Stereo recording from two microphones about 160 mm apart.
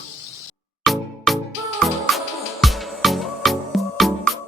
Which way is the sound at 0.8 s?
Centre (ahead or behind).